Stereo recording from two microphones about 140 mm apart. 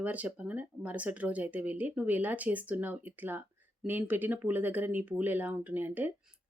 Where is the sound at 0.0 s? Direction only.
10° right (ahead or behind).